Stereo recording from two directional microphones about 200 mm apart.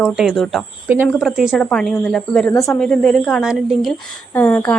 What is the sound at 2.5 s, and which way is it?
Speech, 15° left (ahead or behind).